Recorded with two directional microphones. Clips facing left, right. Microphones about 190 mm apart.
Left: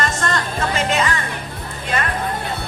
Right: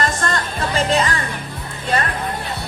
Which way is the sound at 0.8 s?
35° right (ahead or behind).